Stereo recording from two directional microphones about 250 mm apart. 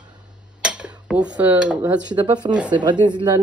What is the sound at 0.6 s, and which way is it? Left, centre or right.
Dishes, centre.